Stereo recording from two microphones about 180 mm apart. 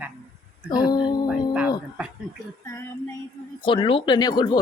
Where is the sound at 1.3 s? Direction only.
5° right (ahead or behind).